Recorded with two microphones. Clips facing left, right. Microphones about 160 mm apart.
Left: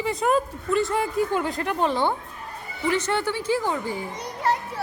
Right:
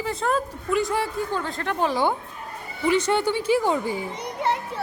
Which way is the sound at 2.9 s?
15° right (ahead or behind).